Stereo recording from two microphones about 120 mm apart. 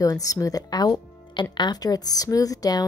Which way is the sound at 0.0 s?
30° left (ahead or behind).